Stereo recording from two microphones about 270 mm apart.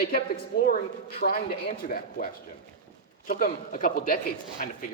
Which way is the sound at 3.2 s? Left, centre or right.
Left.